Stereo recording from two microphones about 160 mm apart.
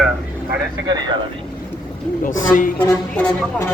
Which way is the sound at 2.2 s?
55° left (ahead or behind).